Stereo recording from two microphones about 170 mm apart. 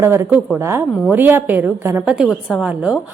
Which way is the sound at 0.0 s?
15° right (ahead or behind).